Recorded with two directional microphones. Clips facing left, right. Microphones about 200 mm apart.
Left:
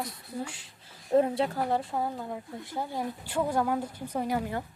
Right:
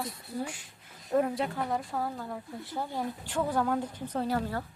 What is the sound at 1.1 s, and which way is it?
Speech, 25° left (ahead or behind).